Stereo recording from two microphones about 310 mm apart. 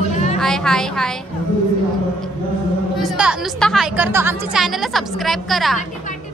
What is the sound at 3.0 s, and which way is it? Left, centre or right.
A woman's voice, centre.